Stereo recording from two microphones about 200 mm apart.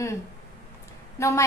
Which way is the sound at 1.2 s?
15° left (ahead or behind).